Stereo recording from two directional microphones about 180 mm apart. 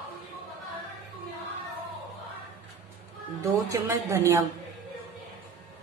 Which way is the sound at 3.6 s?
15° right (ahead or behind).